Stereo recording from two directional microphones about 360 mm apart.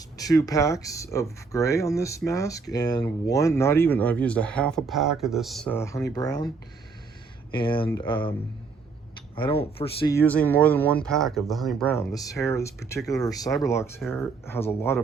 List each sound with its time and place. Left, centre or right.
0.2 s speech: centre
7.5 s speech: centre